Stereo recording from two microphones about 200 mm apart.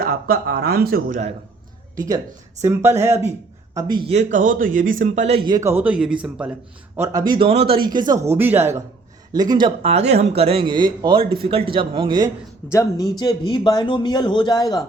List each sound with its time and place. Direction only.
0.0 s speech: 50° right (ahead or behind)
2.0 s a man's voice: 20° right (ahead or behind)
12.7 s a man's voice: 20° left (ahead or behind)